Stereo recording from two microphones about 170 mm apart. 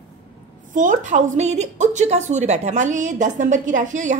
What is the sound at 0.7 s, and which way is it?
A woman's voice, 50° right (ahead or behind).